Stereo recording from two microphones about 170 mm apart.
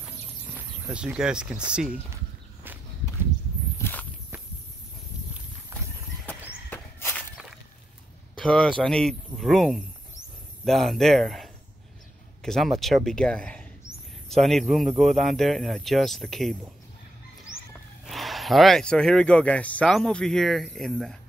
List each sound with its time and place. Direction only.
0.6 s speech: 5° right (ahead or behind)
3.7 s walk: 15° left (ahead or behind)
5.7 s horse: 15° right (ahead or behind)
6.7 s walk: 15° left (ahead or behind)
8.4 s speech: 5° left (ahead or behind)
18.0 s speech: centre (ahead or behind)